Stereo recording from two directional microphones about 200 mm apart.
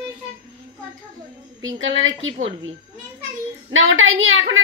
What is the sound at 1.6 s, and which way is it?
Speech, 75° right (ahead or behind).